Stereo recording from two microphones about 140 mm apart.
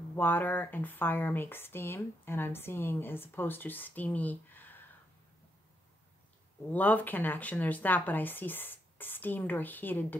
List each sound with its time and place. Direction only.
0.1 s speech: 15° left (ahead or behind)
6.7 s speech: 10° left (ahead or behind)